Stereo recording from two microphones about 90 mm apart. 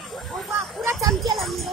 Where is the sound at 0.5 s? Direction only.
30° right (ahead or behind).